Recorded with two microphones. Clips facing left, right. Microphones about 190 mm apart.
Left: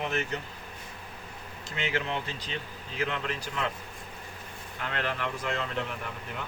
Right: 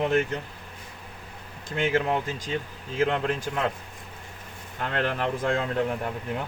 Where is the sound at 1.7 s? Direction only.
50° right (ahead or behind).